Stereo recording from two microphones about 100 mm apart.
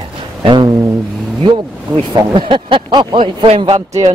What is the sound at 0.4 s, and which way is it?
Speech, 50° right (ahead or behind).